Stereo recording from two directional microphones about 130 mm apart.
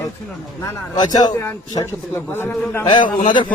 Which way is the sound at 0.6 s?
30° left (ahead or behind).